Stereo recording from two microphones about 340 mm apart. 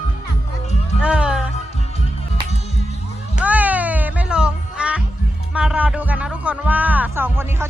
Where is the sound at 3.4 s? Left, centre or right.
Centre.